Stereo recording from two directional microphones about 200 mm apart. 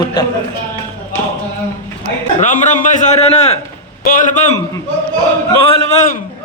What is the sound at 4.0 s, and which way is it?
Speech, 40° left (ahead or behind).